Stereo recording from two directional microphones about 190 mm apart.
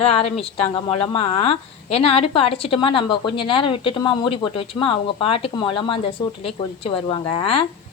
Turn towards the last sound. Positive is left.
turn(degrees=30)  # may be behind; listen again after turning